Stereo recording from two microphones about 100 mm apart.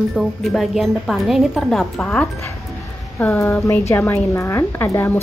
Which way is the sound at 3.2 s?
20° left (ahead or behind).